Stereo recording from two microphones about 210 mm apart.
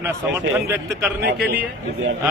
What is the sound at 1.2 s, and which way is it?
Speech, 50° right (ahead or behind).